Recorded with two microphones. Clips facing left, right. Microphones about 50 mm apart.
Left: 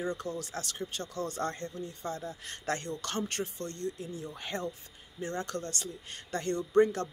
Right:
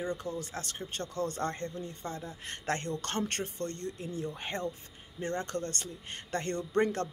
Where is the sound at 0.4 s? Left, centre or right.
Right.